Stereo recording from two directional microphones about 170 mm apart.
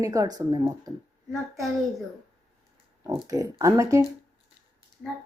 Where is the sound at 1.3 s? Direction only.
Centre (ahead or behind).